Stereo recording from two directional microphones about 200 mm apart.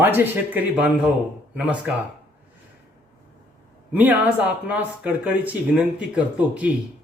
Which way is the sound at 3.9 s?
10° right (ahead or behind).